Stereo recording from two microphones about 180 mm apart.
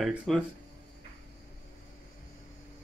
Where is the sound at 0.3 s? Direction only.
Centre (ahead or behind).